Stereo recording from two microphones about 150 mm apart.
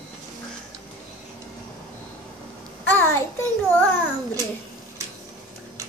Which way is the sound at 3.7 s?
10° left (ahead or behind).